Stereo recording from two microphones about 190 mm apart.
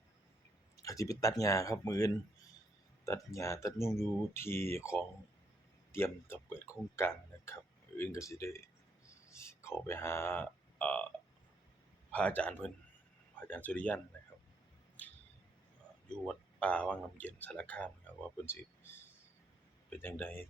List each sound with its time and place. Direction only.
0.8 s a man's voice: 15° left (ahead or behind)
12.1 s a man's voice: 5° left (ahead or behind)
16.2 s a man's voice: 5° left (ahead or behind)
19.9 s a man's voice: 10° left (ahead or behind)